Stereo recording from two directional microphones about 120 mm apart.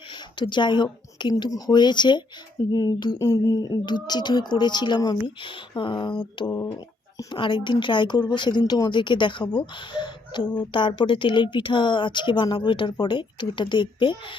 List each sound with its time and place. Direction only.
0.1 s speech: 40° left (ahead or behind)
7.3 s a woman's voice: 40° left (ahead or behind)